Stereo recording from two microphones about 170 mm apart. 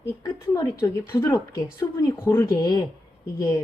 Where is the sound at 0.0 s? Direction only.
20° left (ahead or behind).